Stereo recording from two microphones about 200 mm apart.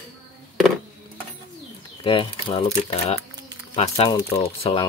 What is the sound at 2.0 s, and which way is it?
Speech, 25° left (ahead or behind).